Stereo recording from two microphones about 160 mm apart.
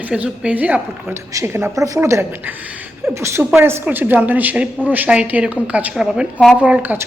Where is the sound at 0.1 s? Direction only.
5° right (ahead or behind).